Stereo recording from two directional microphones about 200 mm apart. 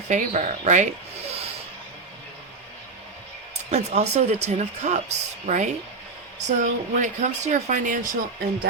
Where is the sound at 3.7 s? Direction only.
35° right (ahead or behind).